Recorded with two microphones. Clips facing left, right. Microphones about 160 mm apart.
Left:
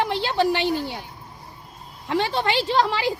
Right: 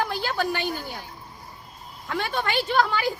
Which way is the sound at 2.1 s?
30° left (ahead or behind).